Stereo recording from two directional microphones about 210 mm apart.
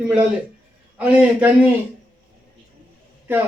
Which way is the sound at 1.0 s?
5° right (ahead or behind).